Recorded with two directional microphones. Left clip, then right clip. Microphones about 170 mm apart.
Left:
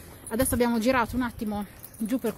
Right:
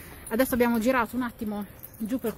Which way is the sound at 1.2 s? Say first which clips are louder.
Left 2 dB; 15° left (ahead or behind).